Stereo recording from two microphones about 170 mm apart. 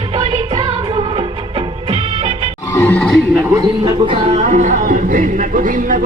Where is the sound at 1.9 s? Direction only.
40° right (ahead or behind).